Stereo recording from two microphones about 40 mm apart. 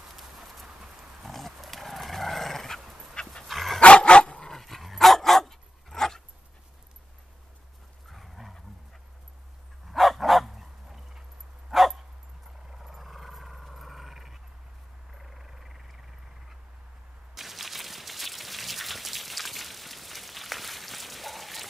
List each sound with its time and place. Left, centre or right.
0.1 s clip-clop: centre
1.2 s dog: centre
3.8 s dog: left
4.5 s dog: centre
8.1 s dog: centre
9.8 s dog: centre
12.7 s a sound: centre
17.4 s rain: centre